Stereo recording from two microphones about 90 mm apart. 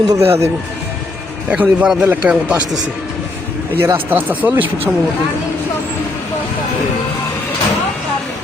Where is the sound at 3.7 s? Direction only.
25° right (ahead or behind).